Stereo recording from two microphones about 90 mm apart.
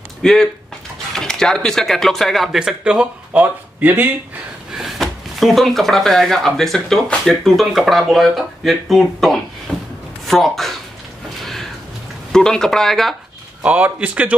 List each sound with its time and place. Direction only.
0.2 s speech: 5° left (ahead or behind)
2.8 s speech: 10° right (ahead or behind)
3.8 s speech: 20° right (ahead or behind)
4.7 s speech: centre (ahead or behind)
12.3 s speech: 5° left (ahead or behind)
13.6 s speech: 15° right (ahead or behind)